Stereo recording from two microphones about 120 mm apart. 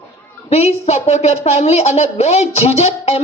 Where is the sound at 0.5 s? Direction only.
70° left (ahead or behind).